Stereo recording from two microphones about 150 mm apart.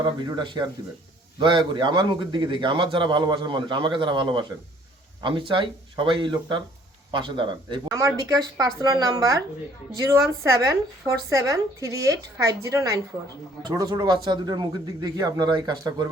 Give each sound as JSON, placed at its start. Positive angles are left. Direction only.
{"t": 0.0, "sound": "a man's voice", "side_deg": -30}
{"t": 7.9, "sound": "speech", "side_deg": -20}